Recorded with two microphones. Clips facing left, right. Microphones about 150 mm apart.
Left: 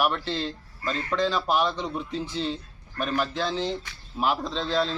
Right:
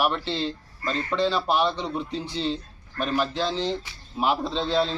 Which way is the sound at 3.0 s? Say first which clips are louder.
Right 2 dB; 5° left (ahead or behind).